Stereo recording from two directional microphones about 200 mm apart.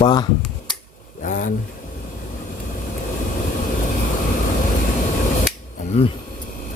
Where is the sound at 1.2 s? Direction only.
40° left (ahead or behind).